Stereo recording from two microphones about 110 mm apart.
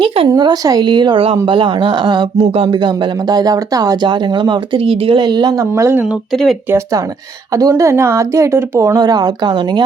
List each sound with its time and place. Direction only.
0.3 s speech: 35° right (ahead or behind)
2.4 s speech: 55° right (ahead or behind); by 6.0 s 25° right (ahead or behind)
6.3 s speech: 5° left (ahead or behind)
6.7 s speech: 25° right (ahead or behind)
9.0 s speech: 40° right (ahead or behind)